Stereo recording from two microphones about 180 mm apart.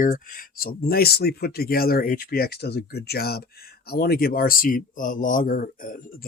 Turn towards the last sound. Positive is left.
turn(degrees=50)  # may be behind; listen again after turning